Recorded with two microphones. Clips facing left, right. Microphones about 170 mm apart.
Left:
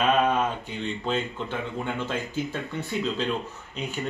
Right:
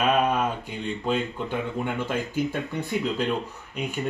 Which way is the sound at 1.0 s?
10° right (ahead or behind).